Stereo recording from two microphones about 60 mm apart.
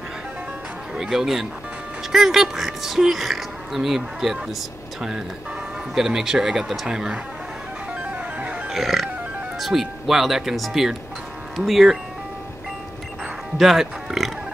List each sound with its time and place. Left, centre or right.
0.9 s speech: centre
5.9 s speech: centre
7.9 s music: right
8.6 s music: centre
9.6 s speech: centre
13.6 s speech: centre